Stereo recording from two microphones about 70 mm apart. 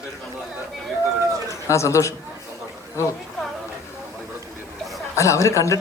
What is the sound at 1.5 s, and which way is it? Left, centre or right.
Speech, left.